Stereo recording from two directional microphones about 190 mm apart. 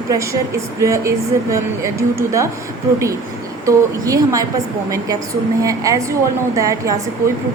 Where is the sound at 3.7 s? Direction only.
15° right (ahead or behind).